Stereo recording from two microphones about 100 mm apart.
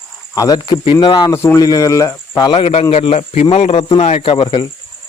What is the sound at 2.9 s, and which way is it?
A man's voice, 90° left.